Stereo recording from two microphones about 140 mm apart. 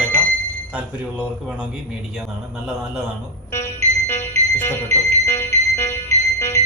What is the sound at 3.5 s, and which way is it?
Music, 15° left (ahead or behind).